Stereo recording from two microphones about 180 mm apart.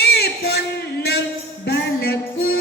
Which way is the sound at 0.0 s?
60° left (ahead or behind).